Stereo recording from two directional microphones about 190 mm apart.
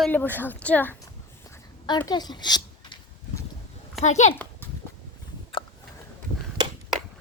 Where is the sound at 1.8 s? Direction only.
25° left (ahead or behind).